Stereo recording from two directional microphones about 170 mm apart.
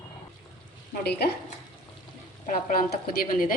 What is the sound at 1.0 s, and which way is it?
Speech, 70° left (ahead or behind).